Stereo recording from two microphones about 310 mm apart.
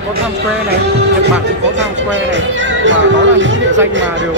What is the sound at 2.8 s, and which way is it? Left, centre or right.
Speech, right.